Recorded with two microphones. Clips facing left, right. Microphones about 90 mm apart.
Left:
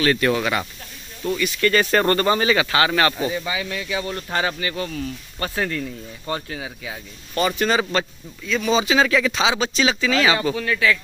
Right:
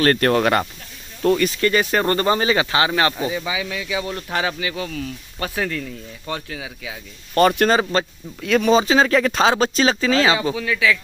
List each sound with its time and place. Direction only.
0.0 s speech: 50° right (ahead or behind)
1.2 s speech: 80° right
1.6 s speech: 15° right (ahead or behind)
2.1 s speech: 25° right (ahead or behind)
3.3 s speech: 5° right (ahead or behind)
7.3 s speech: 50° right (ahead or behind)
7.9 s speech: 35° right (ahead or behind)
8.4 s speech: 65° right (ahead or behind)
8.6 s speech: 40° right (ahead or behind)
9.2 s speech: 45° right (ahead or behind)
10.5 s speech: 5° right (ahead or behind)